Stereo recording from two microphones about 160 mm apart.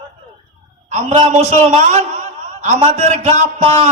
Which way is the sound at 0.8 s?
45° right (ahead or behind).